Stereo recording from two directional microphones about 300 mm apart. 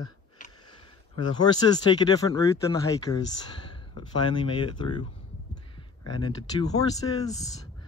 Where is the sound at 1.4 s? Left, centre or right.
Centre.